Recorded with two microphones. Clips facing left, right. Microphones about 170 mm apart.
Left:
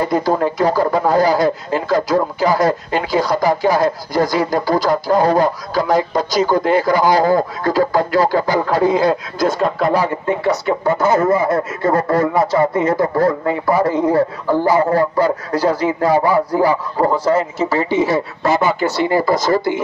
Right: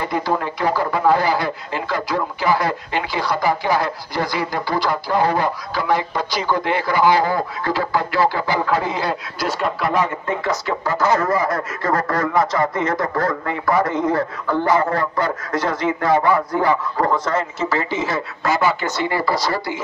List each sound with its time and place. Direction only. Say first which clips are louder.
0.0 s speech: left 6 dB; 40° left (ahead or behind)
9.8 s speech: left 4 dB; 30° left (ahead or behind); by 19.8 s 50° left (ahead or behind)